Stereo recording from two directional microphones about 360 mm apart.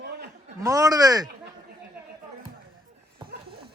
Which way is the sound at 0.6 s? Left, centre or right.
Centre.